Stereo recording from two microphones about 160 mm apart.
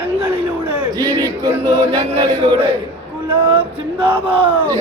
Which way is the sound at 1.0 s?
15° left (ahead or behind).